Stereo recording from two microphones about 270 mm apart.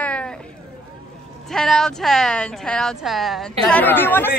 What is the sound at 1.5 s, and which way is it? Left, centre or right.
Speech, centre.